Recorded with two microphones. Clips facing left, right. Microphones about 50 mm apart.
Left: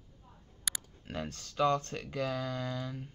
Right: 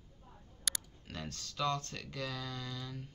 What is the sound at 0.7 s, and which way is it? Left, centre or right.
Clicking, centre.